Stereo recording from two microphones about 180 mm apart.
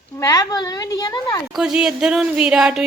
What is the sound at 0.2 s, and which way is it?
A woman's voice, 20° left (ahead or behind).